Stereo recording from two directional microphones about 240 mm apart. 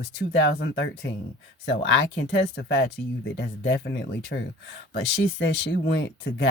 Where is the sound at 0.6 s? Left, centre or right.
Left.